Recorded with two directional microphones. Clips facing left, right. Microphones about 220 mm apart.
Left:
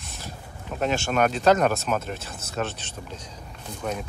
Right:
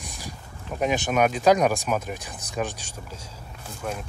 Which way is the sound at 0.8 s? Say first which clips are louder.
Right 1 dB; 15° right (ahead or behind).